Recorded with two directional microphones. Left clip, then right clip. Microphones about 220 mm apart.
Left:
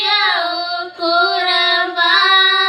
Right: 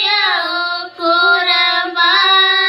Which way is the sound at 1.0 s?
15° right (ahead or behind).